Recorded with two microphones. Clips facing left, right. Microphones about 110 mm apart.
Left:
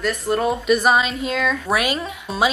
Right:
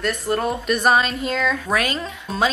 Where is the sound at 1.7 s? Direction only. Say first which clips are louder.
Left 1 dB; 15° left (ahead or behind).